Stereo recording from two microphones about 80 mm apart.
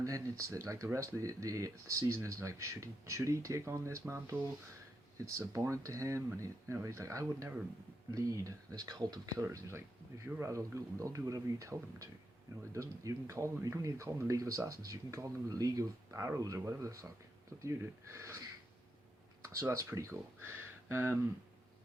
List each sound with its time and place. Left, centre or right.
0.0 s speech: right
5.2 s speech: right
9.4 s speech: right
19.5 s speech: right
20.4 s a sound: right